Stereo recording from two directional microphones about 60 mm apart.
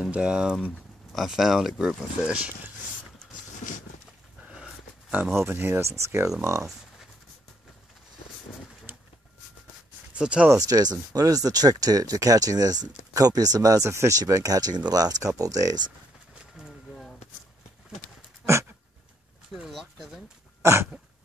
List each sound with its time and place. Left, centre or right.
0.1 s speech: centre
1.1 s speech: centre
2.2 s speech: right
4.5 s a sound: centre
5.3 s speech: right
5.8 s speech: right
8.9 s pigeon: right
10.1 s speech: centre
10.7 s speech: right
13.8 s speech: right
18.4 s a sound: right
19.5 s a sound: centre
20.6 s speech: right